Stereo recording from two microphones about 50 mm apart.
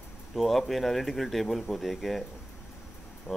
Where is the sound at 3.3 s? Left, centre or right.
Left.